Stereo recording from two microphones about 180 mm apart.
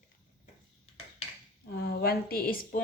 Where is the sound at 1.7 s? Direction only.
60° left (ahead or behind).